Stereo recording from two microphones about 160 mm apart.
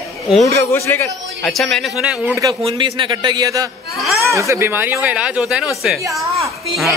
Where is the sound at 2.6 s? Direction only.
30° right (ahead or behind); by 5.7 s 5° right (ahead or behind).